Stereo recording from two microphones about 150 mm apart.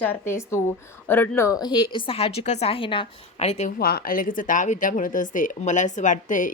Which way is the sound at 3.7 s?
90° left.